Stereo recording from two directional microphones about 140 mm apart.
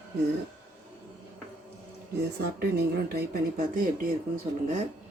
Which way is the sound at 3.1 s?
90° right.